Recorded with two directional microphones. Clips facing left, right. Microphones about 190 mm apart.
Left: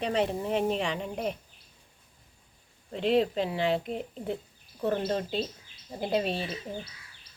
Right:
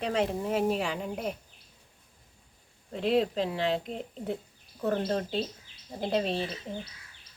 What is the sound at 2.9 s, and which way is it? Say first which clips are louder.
Speech: left 1 dB; centre (ahead or behind).